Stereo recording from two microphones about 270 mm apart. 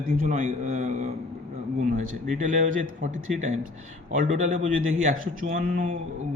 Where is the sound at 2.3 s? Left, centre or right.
Right.